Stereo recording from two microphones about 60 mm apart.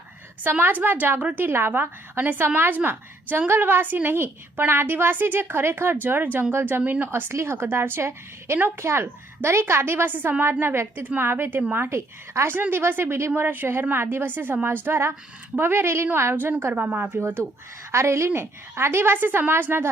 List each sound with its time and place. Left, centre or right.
0.6 s a woman's voice: right
10.1 s a woman's voice: right
12.7 s a woman's voice: right
13.3 s a woman's voice: right